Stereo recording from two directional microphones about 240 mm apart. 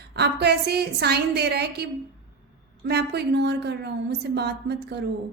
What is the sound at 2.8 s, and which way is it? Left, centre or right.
A woman's voice, right.